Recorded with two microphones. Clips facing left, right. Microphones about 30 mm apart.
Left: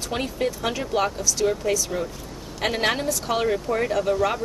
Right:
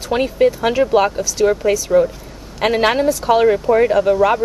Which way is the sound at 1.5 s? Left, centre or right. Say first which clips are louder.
Right 9 dB; right.